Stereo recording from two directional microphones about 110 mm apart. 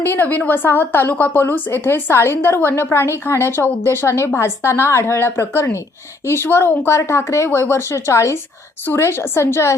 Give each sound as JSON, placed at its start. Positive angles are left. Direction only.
{"t": 0.0, "sound": "a woman's voice", "side_deg": 20}